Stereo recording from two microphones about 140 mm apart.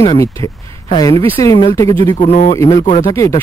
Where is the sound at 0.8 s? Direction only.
30° left (ahead or behind).